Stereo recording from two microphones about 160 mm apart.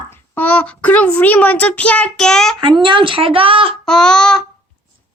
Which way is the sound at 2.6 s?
30° right (ahead or behind).